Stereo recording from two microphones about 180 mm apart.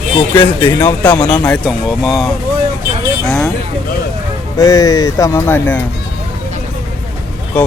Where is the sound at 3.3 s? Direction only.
5° left (ahead or behind).